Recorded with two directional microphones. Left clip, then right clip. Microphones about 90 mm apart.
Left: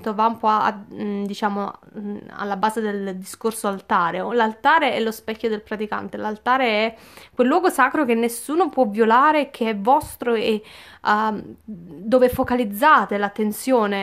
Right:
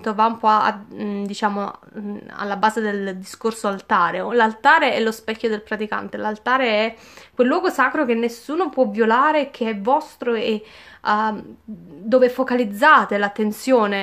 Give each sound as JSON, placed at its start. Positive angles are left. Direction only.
{"t": 0.0, "sound": "a woman's voice", "side_deg": 20}
{"t": 12.5, "sound": "speech", "side_deg": 25}